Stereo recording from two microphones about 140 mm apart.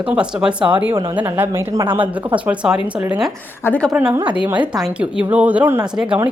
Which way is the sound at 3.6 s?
10° left (ahead or behind).